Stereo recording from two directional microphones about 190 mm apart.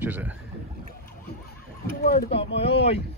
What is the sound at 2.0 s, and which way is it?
Speech, 55° left (ahead or behind).